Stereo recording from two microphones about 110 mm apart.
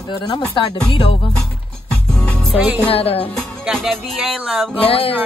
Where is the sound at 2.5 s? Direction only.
15° right (ahead or behind).